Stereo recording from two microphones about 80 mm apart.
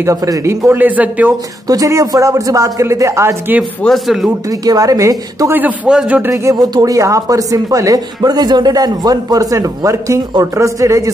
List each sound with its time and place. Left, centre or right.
0.0 s speech: right
0.7 s a man's voice: right
1.7 s speech: right
3.8 s speech: centre
4.5 s speech: right
5.5 s a man's voice: right
6.5 s speech: right